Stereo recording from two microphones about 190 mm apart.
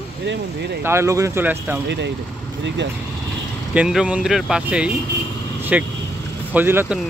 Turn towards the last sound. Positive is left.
turn(degrees=-10)  # may be behind; listen again after turning